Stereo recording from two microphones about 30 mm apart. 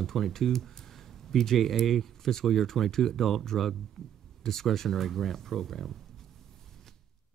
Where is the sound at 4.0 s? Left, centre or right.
Centre.